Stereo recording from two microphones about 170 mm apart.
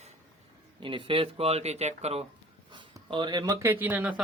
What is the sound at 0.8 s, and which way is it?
A man's voice, 30° right (ahead or behind).